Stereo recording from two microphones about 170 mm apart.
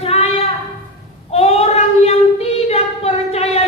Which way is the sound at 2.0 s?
35° left (ahead or behind).